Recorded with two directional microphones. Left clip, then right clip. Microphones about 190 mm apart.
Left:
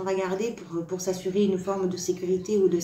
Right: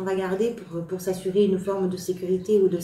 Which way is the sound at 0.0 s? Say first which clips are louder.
Right 2 dB; 35° left (ahead or behind).